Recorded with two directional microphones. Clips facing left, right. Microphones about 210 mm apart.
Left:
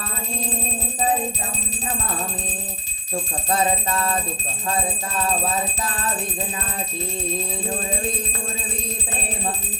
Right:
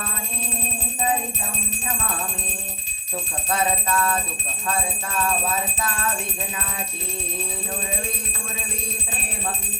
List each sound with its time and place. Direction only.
3.5 s music: 25° left (ahead or behind)